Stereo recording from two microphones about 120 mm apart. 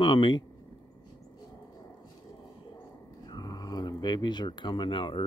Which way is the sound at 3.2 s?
35° left (ahead or behind).